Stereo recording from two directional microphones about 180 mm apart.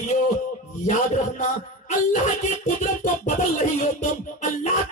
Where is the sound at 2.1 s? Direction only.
40° left (ahead or behind).